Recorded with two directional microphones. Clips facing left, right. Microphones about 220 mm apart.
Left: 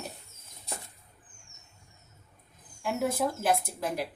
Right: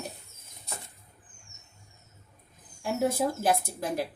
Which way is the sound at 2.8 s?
25° right (ahead or behind).